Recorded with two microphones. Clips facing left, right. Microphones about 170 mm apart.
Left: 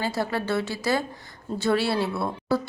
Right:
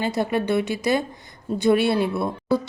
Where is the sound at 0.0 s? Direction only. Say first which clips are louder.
Right 4 dB; 20° right (ahead or behind).